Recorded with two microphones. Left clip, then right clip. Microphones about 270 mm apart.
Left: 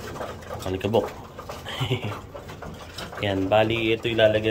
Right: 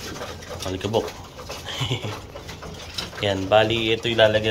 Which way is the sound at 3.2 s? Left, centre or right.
Centre.